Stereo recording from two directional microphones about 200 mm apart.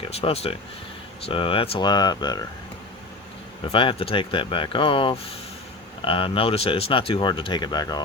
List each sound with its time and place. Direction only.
0.0 s speech: 30° left (ahead or behind)
3.7 s speech: 25° left (ahead or behind)